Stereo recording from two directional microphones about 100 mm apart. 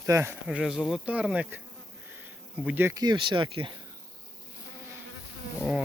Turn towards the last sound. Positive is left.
turn(degrees=-5)  # may be behind; listen again after turning